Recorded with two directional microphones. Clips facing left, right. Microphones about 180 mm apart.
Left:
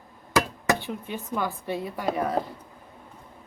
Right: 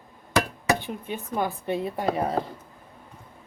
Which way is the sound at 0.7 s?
15° right (ahead or behind).